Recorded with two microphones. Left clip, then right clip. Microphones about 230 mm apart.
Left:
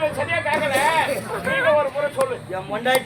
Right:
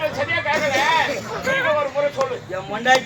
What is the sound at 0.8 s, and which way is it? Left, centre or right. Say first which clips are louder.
Speech: right 1 dB; left.